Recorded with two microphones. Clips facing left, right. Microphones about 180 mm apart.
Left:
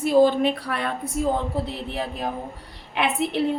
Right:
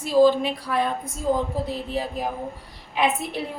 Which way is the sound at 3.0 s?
65° left (ahead or behind).